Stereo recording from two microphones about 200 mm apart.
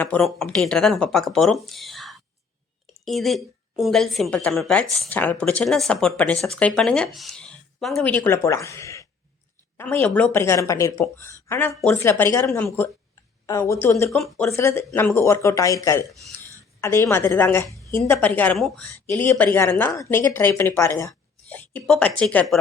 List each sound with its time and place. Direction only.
0.0 s a woman's voice: 5° left (ahead or behind)
14.5 s speech: 15° left (ahead or behind)